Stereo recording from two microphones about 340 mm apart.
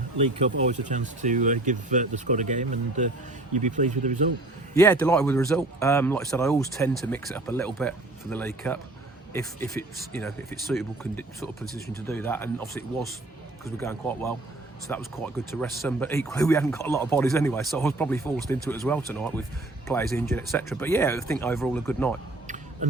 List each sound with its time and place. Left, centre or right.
0.2 s speech: centre
4.7 s speech: centre
22.4 s a sound: right